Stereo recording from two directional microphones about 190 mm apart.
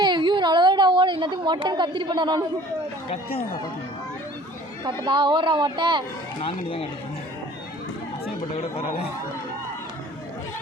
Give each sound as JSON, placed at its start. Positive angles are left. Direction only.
{"t": 0.0, "sound": "a sound", "side_deg": -25}
{"t": 3.3, "sound": "speech", "side_deg": 20}
{"t": 4.9, "sound": "a woman's voice", "side_deg": -25}
{"t": 8.7, "sound": "speech", "side_deg": 30}